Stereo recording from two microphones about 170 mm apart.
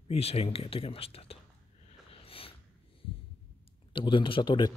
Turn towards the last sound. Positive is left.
turn(degrees=30)  # may be behind; listen again after turning